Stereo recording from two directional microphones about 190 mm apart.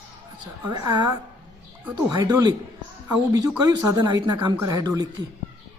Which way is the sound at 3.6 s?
20° right (ahead or behind).